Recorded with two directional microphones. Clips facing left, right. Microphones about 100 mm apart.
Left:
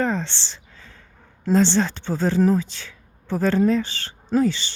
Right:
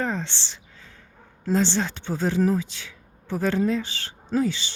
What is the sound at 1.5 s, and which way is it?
Speech, 90° left.